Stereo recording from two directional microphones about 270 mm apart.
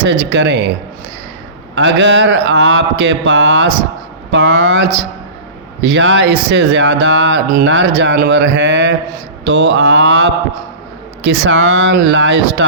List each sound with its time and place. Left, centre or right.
0.0 s speech: right
1.7 s speech: right